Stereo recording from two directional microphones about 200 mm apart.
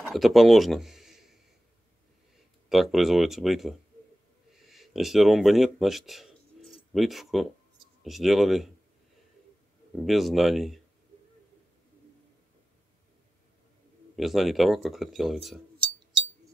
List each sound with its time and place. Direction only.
0.1 s speech: centre (ahead or behind)
2.7 s speech: centre (ahead or behind)
9.9 s speech: centre (ahead or behind)
14.1 s speech: centre (ahead or behind)
15.8 s chink: 25° right (ahead or behind)